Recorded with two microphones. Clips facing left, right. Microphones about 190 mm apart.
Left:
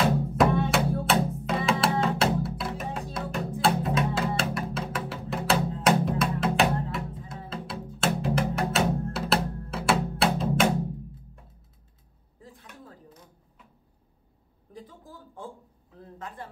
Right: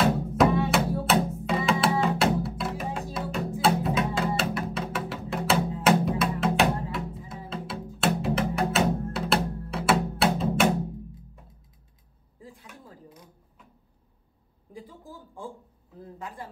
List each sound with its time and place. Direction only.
0.0 s music: centre (ahead or behind)
12.4 s chopping: 10° right (ahead or behind)
14.7 s a sound: 10° right (ahead or behind)